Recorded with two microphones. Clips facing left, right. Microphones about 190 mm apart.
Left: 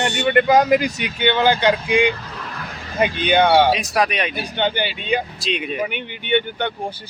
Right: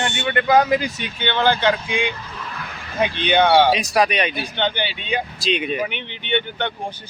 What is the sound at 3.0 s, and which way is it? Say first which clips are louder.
Speech: left 1 dB; 5° left (ahead or behind).